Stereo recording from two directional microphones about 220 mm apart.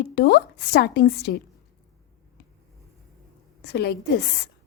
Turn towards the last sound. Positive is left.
turn(degrees=50)  # may be behind; listen again after turning